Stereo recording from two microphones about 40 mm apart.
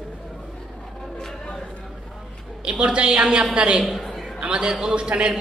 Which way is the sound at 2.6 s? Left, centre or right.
Right.